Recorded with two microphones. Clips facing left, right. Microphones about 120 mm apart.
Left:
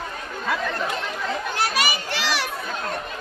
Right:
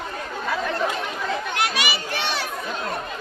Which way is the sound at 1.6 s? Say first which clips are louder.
Left 3 dB; 40° left (ahead or behind).